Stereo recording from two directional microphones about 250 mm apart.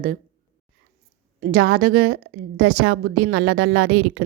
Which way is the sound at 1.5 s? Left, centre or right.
Right.